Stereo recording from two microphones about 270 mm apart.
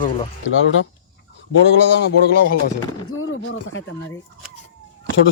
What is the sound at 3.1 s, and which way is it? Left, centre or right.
Speech, left.